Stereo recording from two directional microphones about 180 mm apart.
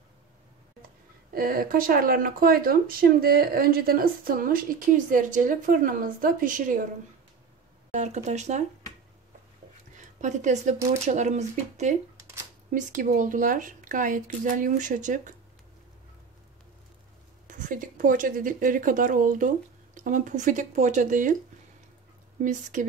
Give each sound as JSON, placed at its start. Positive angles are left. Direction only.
{"t": 1.3, "sound": "speech", "side_deg": -55}
{"t": 7.9, "sound": "speech", "side_deg": -40}
{"t": 9.9, "sound": "speech", "side_deg": -40}
{"t": 17.5, "sound": "speech", "side_deg": -45}
{"t": 22.4, "sound": "speech", "side_deg": -45}